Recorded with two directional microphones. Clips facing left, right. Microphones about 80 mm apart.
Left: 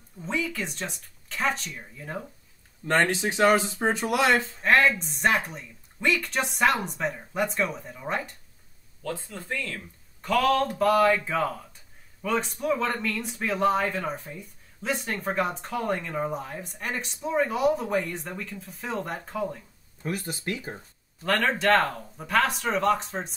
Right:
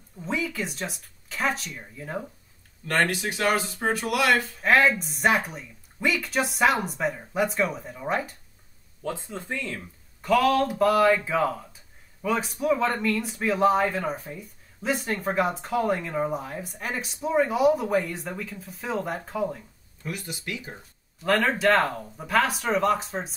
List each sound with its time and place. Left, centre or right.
0.2 s speech: centre
2.9 s speech: left
4.6 s speech: centre
9.0 s speech: right
10.2 s speech: centre
20.0 s speech: left
21.2 s speech: centre